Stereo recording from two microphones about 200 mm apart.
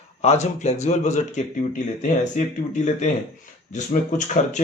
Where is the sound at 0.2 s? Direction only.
35° left (ahead or behind).